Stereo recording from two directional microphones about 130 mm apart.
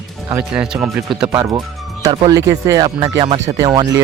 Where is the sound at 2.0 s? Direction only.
30° right (ahead or behind).